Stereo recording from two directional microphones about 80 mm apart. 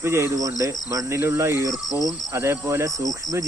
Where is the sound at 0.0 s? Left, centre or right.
Right.